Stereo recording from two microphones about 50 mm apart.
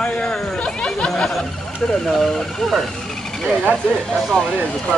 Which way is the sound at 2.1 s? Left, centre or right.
Centre.